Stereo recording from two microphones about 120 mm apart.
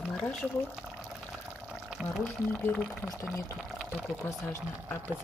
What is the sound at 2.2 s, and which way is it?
Speech, 10° left (ahead or behind).